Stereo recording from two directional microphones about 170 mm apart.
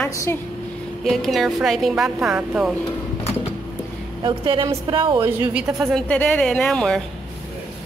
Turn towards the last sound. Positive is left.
turn(degrees=5)  # may be behind; listen again after turning